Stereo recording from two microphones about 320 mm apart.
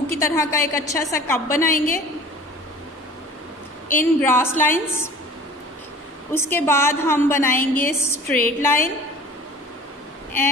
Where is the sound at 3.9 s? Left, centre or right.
Centre.